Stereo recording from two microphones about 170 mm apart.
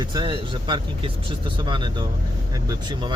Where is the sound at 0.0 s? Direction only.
25° right (ahead or behind).